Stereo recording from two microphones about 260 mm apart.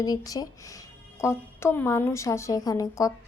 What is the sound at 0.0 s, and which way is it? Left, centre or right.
Speech, centre.